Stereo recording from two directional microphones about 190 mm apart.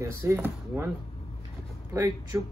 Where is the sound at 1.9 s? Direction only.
15° right (ahead or behind).